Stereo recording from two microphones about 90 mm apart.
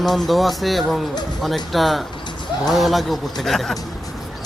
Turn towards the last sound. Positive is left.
turn(degrees=5)  # may be behind; listen again after turning